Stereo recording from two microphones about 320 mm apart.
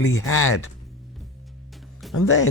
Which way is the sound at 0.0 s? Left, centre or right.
Left.